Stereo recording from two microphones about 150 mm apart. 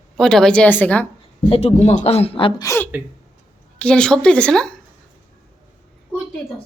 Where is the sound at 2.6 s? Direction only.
20° left (ahead or behind).